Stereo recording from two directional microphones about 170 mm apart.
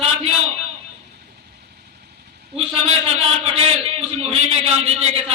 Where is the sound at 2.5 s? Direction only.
35° right (ahead or behind).